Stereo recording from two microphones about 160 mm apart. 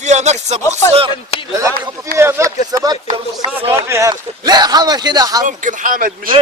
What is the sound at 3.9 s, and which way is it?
Speech, 20° right (ahead or behind).